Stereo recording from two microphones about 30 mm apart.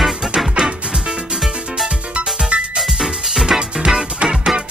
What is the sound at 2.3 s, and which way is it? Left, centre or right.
Music, right.